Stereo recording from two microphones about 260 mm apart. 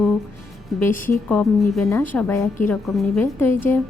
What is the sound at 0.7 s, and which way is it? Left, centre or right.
A woman's voice, centre.